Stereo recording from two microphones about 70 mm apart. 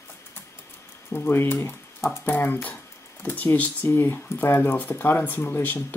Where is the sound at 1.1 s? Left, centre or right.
Left.